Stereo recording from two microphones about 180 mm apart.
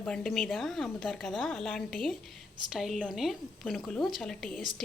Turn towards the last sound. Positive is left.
turn(degrees=0)  # may be behind; listen again after turning